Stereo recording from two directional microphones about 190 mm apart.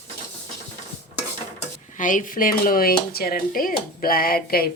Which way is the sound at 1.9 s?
45° left (ahead or behind).